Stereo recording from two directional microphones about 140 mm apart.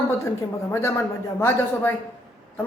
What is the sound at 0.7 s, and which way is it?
Speech, 20° left (ahead or behind).